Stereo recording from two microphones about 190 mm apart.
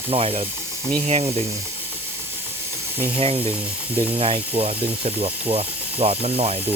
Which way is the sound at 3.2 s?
30° right (ahead or behind).